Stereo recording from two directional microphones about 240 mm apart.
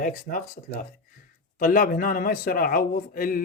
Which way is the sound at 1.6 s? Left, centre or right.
Left.